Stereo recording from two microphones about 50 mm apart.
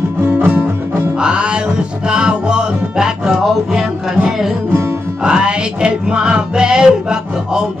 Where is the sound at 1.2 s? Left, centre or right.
Centre.